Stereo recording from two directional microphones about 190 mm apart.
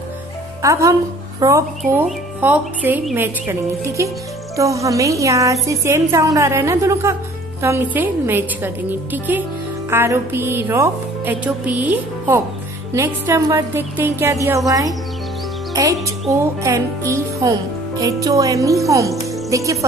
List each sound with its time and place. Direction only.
0.6 s a woman's voice: 15° right (ahead or behind)